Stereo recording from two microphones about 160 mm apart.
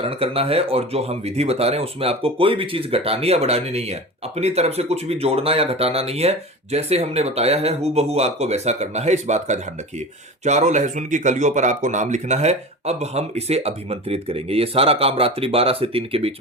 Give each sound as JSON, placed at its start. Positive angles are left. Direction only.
{"t": 0.0, "sound": "speech", "side_deg": -35}